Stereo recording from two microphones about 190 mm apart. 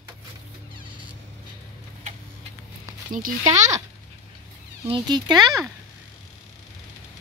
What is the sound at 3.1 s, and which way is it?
Speech, 45° right (ahead or behind).